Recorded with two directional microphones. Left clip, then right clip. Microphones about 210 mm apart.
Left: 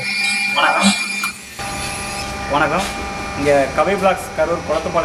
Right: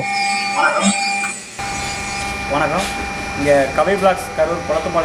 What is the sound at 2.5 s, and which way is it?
Speech, 10° right (ahead or behind).